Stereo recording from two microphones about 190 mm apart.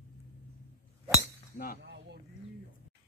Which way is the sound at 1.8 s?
60° right (ahead or behind).